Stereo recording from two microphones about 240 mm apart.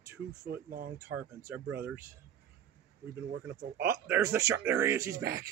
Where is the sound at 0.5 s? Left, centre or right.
Right.